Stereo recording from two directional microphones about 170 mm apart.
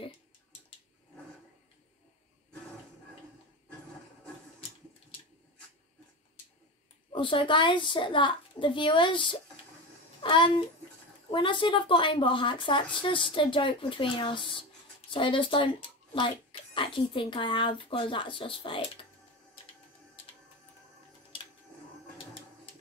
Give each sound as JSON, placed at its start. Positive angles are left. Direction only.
{"t": 7.1, "sound": "a woman's voice", "side_deg": 30}